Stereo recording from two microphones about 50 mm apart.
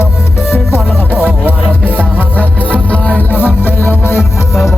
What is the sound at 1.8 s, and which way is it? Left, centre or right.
Music, left.